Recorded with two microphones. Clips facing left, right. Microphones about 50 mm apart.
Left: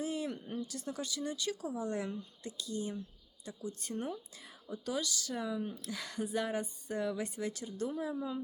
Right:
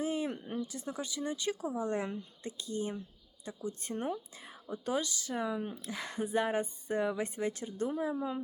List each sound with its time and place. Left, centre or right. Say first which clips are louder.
0.0 s speech: right 3 dB; right